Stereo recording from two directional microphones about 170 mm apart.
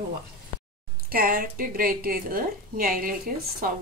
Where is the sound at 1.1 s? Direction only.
60° right (ahead or behind).